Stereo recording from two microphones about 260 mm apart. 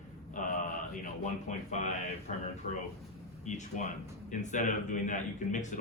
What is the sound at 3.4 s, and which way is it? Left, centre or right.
Speech, left.